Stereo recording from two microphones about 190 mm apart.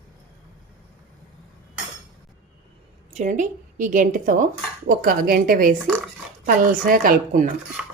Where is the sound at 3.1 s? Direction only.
40° right (ahead or behind).